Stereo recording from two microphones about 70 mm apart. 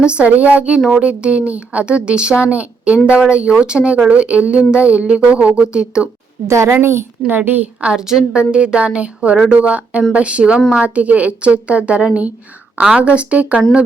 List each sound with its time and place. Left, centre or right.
0.0 s speech: centre
6.5 s a woman's voice: right
7.3 s a woman's voice: right